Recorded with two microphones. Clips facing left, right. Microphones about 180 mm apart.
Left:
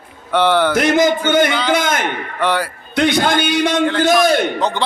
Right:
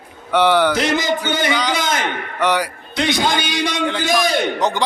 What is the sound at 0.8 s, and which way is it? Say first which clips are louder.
Speech: left 5 dB; 50° left (ahead or behind).